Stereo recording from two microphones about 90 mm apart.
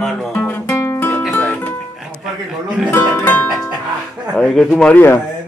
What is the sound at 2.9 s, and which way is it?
Speech, 20° left (ahead or behind).